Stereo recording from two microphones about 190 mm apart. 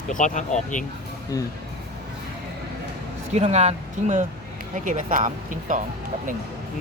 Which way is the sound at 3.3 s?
35° right (ahead or behind).